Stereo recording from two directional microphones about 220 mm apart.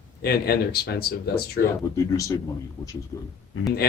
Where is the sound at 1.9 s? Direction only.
15° left (ahead or behind).